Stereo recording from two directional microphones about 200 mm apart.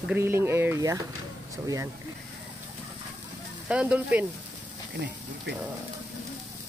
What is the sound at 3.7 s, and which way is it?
Speech, 5° right (ahead or behind).